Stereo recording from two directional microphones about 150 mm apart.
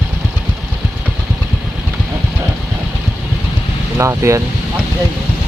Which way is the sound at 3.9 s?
20° right (ahead or behind).